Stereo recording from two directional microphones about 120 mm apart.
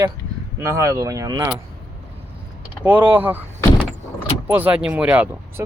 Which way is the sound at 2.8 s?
15° right (ahead or behind).